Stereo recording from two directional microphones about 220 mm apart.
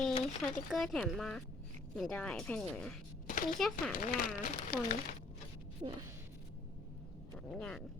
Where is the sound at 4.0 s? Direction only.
40° left (ahead or behind).